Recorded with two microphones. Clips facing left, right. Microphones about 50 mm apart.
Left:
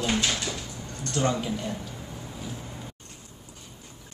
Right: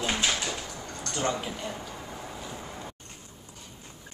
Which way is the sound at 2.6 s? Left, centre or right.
Right.